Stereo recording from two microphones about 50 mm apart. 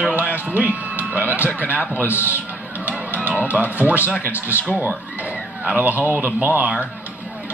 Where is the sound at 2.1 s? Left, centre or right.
Left.